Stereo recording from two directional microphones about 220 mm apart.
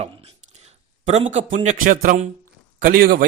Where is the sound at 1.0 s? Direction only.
30° right (ahead or behind).